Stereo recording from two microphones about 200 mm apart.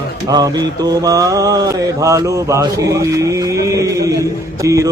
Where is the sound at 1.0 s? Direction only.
15° right (ahead or behind).